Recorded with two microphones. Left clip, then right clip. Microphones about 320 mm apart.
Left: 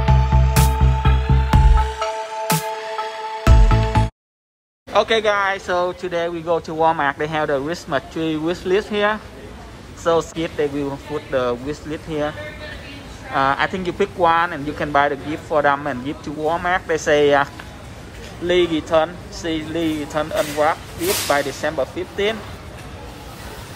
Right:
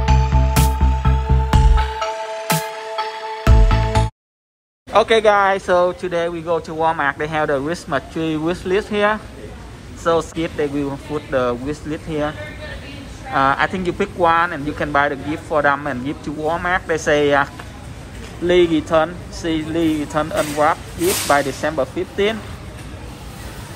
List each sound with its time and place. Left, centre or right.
0.0 s music: centre
4.9 s speech: centre
18.5 s speech: centre